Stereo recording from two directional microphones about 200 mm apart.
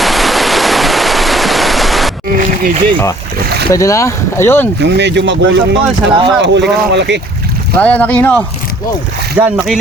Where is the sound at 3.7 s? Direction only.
15° left (ahead or behind).